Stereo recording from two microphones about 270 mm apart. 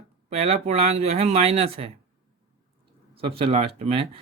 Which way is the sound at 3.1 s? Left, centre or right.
Centre.